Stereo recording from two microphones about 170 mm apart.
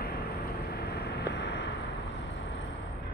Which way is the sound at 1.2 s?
80° left.